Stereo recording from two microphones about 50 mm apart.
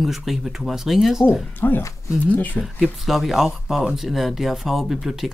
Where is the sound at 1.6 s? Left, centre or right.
Left.